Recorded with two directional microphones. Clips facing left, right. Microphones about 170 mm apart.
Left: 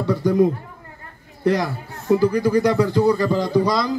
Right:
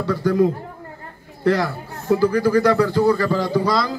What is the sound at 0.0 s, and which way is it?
Speech, 20° left (ahead or behind).